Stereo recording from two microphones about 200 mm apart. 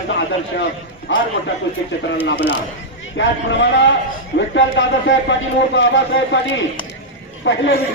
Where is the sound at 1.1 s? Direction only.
70° left (ahead or behind).